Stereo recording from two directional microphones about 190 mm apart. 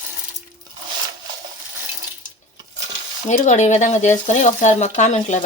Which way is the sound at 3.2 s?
35° left (ahead or behind).